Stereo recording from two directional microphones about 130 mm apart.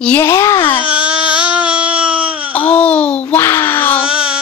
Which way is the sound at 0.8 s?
10° right (ahead or behind).